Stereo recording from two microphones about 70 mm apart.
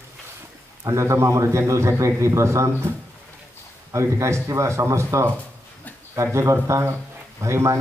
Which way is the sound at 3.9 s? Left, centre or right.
Right.